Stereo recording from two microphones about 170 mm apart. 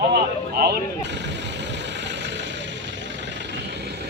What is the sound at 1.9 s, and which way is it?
Vehicle, 90° right.